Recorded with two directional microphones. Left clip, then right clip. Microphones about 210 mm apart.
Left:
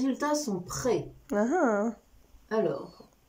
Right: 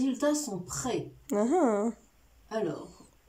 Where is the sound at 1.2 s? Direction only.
15° right (ahead or behind).